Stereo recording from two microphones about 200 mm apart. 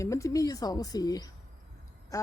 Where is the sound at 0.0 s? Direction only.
15° left (ahead or behind).